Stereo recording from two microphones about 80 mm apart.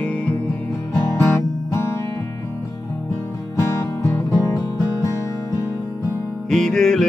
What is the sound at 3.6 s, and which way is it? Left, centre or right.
Music, left.